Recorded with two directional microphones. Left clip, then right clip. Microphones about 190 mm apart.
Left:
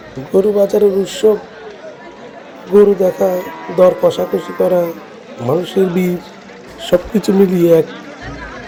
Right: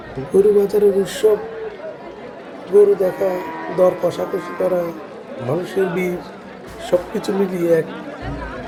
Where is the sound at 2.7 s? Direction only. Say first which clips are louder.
Left 3 dB; 40° left (ahead or behind).